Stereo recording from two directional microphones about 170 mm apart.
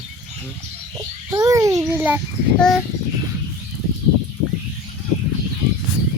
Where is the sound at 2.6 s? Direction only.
Centre (ahead or behind).